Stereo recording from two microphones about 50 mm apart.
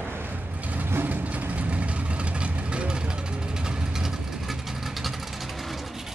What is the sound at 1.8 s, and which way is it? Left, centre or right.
Vehicle, right.